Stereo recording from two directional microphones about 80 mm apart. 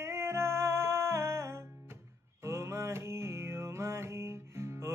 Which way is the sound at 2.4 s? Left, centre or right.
Right.